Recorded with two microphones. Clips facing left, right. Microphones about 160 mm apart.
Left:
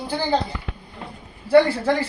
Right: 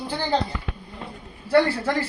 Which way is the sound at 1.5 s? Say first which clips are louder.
Left 4 dB; 15° left (ahead or behind).